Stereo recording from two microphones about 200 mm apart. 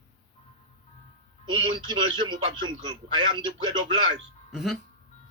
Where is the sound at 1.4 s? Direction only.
25° right (ahead or behind).